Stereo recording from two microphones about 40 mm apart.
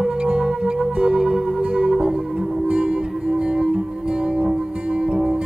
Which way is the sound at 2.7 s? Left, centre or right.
Right.